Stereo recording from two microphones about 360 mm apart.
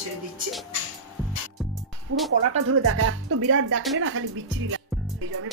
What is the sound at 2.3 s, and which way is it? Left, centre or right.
Speech, right.